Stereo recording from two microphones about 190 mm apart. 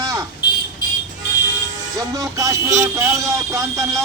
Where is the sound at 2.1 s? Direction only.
15° right (ahead or behind).